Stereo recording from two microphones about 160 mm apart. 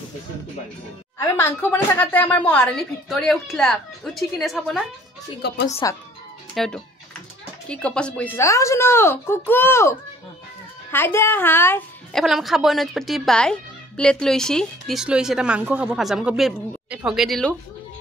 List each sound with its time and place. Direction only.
1.1 s speech: 15° left (ahead or behind); by 4.8 s centre (ahead or behind)
5.8 s speech: 25° left (ahead or behind)
6.5 s speech: centre (ahead or behind)
12.1 s speech: centre (ahead or behind)